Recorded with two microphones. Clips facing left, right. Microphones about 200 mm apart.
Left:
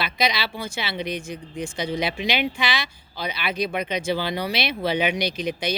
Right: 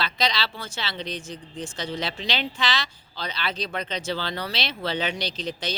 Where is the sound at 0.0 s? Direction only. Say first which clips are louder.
Left 2 dB; 10° left (ahead or behind).